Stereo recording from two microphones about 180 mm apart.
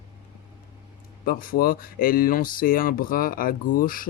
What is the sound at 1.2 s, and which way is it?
Speech, 50° left (ahead or behind).